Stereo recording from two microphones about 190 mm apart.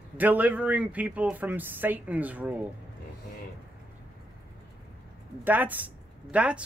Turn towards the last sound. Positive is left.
turn(degrees=-5)  # may be behind; listen again after turning